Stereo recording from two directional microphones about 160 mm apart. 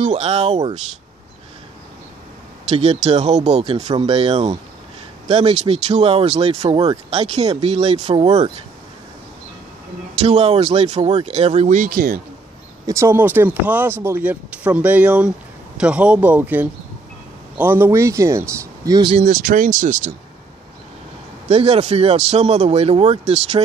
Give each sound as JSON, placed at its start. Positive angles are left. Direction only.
{"t": 0.0, "sound": "speech", "side_deg": -45}
{"t": 2.7, "sound": "speech", "side_deg": -45}
{"t": 10.2, "sound": "speech", "side_deg": -40}
{"t": 12.8, "sound": "speech", "side_deg": -20}
{"t": 19.2, "sound": "speech", "side_deg": -65}
{"t": 21.5, "sound": "speech", "side_deg": -40}